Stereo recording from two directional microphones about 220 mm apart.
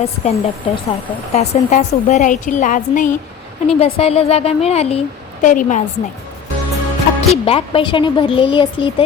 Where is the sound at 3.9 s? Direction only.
25° left (ahead or behind).